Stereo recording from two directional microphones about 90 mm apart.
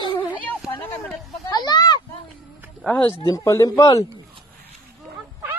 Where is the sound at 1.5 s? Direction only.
50° left (ahead or behind).